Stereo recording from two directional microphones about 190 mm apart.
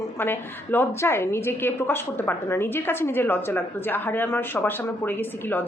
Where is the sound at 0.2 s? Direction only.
10° left (ahead or behind).